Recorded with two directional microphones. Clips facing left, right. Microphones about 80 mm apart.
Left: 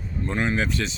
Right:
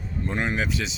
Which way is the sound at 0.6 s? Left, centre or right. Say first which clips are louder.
Left 2 dB; centre.